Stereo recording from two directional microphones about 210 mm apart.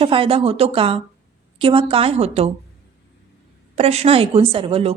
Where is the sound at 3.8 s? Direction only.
30° right (ahead or behind).